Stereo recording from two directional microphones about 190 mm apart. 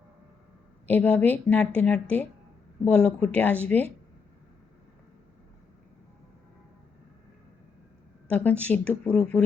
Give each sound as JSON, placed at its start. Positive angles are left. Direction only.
{"t": 0.9, "sound": "a woman's voice", "side_deg": 10}
{"t": 8.3, "sound": "a woman's voice", "side_deg": 5}